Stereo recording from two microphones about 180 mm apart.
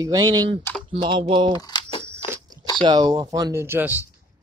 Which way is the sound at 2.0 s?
15° right (ahead or behind).